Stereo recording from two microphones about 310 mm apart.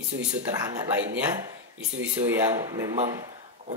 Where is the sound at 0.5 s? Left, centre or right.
Centre.